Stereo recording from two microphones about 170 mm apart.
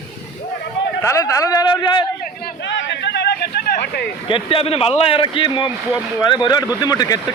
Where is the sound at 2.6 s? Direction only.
90° left; by 4.1 s 75° left (ahead or behind).